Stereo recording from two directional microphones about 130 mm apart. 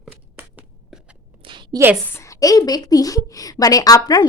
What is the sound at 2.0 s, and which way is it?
A woman's voice, 20° left (ahead or behind).